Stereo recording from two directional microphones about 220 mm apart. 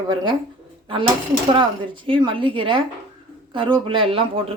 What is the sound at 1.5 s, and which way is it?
Speech, 20° right (ahead or behind).